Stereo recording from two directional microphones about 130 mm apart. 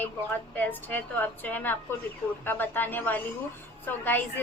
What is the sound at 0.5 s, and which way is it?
A woman's voice, 15° left (ahead or behind).